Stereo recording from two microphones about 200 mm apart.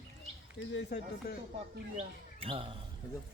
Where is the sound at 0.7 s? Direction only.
60° left (ahead or behind).